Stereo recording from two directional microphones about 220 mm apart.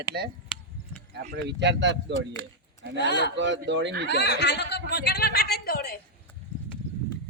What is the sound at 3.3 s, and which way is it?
Speech, 55° right (ahead or behind).